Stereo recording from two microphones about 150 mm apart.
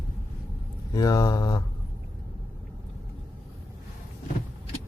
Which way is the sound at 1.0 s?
25° left (ahead or behind).